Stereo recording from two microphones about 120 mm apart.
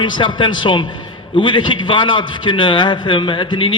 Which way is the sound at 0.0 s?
40° left (ahead or behind).